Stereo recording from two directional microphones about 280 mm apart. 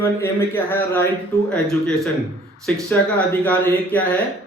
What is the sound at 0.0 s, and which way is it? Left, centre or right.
Speech, centre.